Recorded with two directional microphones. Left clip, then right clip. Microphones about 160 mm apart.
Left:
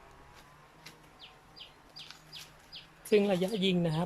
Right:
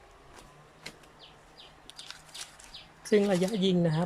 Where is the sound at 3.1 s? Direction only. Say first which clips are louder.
Right 2 dB; centre (ahead or behind).